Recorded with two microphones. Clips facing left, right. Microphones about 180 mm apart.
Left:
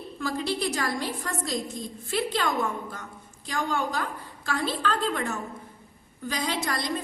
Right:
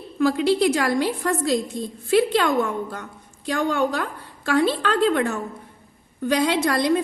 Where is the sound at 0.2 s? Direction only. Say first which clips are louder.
Right 10 dB; 65° right (ahead or behind).